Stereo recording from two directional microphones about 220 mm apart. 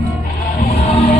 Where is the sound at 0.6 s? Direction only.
30° left (ahead or behind).